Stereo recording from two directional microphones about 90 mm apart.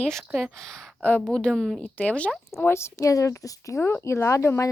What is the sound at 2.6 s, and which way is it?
Speech, 30° left (ahead or behind).